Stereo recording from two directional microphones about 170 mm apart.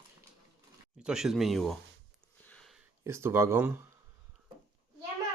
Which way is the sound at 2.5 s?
5° left (ahead or behind).